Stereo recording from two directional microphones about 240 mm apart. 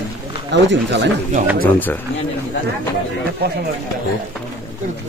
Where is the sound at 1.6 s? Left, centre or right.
Centre.